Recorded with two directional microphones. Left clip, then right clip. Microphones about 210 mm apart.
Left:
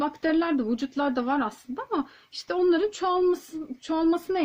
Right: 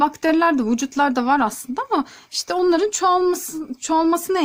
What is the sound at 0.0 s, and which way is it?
A woman's voice, 45° right (ahead or behind).